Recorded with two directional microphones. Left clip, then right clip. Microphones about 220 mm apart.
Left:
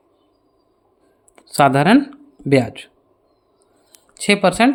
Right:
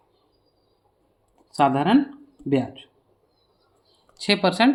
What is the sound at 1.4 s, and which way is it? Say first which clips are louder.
Speech: left 6 dB; 45° left (ahead or behind).